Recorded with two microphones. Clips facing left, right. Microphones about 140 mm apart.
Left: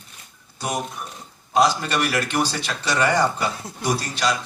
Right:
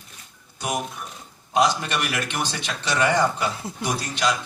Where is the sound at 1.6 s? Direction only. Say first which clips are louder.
Left 2 dB; 35° left (ahead or behind).